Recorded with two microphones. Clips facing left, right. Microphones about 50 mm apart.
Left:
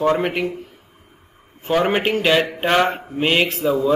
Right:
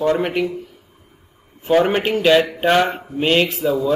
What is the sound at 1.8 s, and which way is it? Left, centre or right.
A man's voice, centre.